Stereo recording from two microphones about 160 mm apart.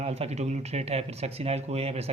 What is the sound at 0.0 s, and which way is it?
Speech, 40° right (ahead or behind).